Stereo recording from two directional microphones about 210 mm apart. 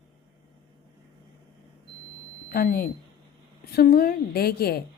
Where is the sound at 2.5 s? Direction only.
45° left (ahead or behind).